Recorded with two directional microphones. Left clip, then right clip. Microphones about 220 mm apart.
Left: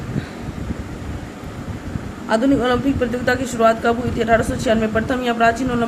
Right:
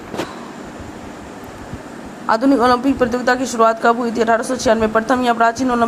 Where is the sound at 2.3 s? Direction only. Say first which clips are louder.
Right 4 dB; 15° right (ahead or behind).